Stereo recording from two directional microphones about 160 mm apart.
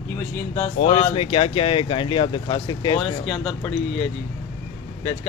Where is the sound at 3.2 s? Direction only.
Centre (ahead or behind).